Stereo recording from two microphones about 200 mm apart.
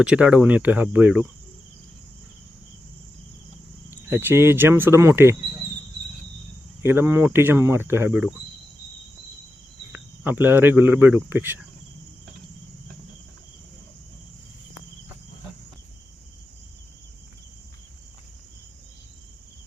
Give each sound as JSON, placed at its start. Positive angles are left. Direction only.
{"t": 0.0, "sound": "speech", "side_deg": -5}
{"t": 3.8, "sound": "speech", "side_deg": -10}
{"t": 6.8, "sound": "speech", "side_deg": -10}
{"t": 9.9, "sound": "speech", "side_deg": -10}